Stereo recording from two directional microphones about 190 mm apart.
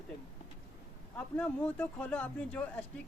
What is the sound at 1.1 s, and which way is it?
Speech, 5° left (ahead or behind).